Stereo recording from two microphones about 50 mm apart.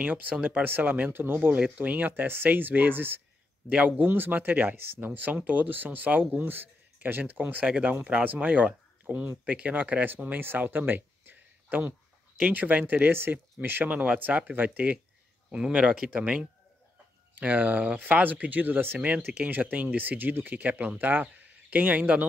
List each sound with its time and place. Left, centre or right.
0.0 s speech: right
3.6 s speech: right
4.1 s speech: right
10.4 s a sound: right
12.4 s speech: right
15.5 s speech: centre; by 18.9 s right
18.9 s speech: right